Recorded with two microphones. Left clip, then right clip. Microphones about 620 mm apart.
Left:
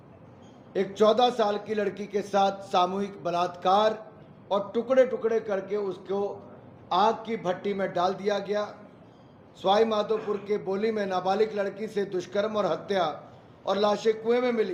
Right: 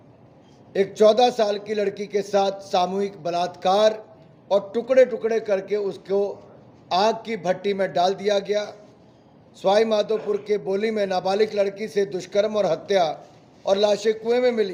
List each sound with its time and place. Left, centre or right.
0.7 s a man's voice: right